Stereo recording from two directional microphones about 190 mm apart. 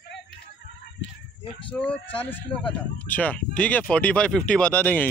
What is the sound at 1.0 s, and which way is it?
Speech, 70° left (ahead or behind).